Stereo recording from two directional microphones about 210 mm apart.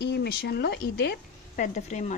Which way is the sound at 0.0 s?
50° left (ahead or behind).